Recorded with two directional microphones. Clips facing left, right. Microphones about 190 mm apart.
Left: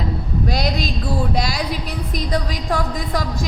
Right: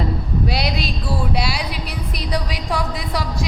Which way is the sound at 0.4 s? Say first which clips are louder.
Left 2 dB; 45° left (ahead or behind).